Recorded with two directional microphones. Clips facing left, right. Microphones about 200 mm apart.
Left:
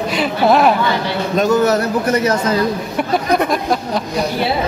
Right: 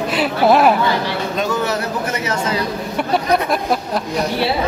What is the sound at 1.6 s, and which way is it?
Speech, 40° left (ahead or behind).